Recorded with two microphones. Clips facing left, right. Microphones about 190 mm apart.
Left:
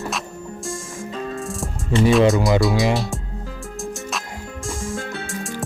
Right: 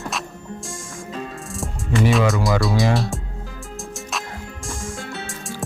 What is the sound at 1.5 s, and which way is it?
Music, centre (ahead or behind).